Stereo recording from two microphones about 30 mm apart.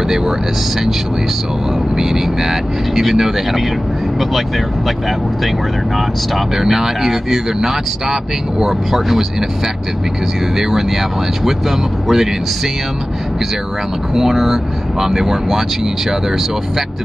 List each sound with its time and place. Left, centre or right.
2.0 s speech: centre
6.5 s speech: centre
10.6 s speech: centre
14.1 s speech: centre